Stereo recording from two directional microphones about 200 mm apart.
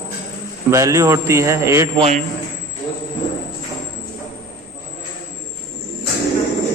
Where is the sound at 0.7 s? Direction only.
15° right (ahead or behind).